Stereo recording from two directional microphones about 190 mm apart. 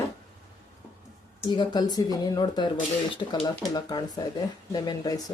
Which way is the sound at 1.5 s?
20° left (ahead or behind).